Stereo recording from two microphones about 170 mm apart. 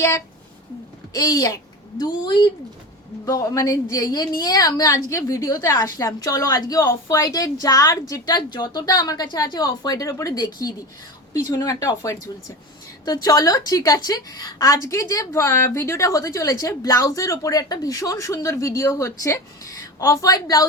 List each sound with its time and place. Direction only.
1.1 s a woman's voice: 20° left (ahead or behind)
13.2 s a woman's voice: 20° left (ahead or behind)